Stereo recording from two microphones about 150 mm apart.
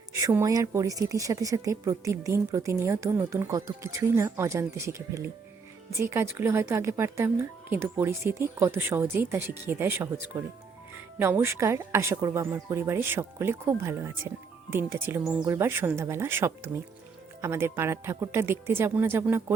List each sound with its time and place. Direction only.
0.1 s a woman's voice: 20° right (ahead or behind)
11.2 s speech: 15° right (ahead or behind)